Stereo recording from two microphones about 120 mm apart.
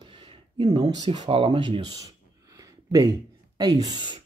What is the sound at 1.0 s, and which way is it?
Speech, 50° right (ahead or behind).